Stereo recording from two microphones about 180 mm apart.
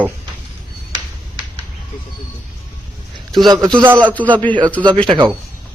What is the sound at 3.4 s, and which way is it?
Speech, 20° right (ahead or behind).